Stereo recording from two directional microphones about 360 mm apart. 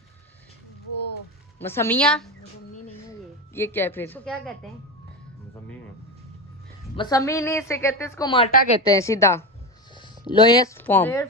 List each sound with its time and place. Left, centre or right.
0.9 s music: left
1.6 s a woman's voice: centre
7.0 s a woman's voice: centre
8.8 s a woman's voice: centre